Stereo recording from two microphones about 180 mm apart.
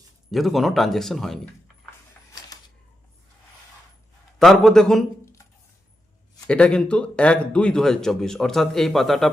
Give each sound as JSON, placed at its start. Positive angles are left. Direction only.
{"t": 0.3, "sound": "speech", "side_deg": 0}
{"t": 2.3, "sound": "a sound", "side_deg": 20}
{"t": 4.4, "sound": "speech", "side_deg": 0}
{"t": 6.5, "sound": "speech", "side_deg": 5}